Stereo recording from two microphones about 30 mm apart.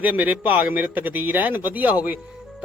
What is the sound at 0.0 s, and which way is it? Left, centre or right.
Speech, right.